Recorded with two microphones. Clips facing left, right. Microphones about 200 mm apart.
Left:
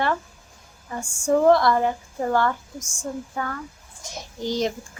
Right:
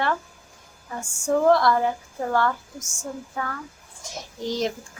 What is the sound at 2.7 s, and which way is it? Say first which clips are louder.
Speech: left 2 dB; 20° right (ahead or behind).